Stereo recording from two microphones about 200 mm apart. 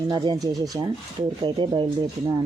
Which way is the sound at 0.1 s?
20° right (ahead or behind).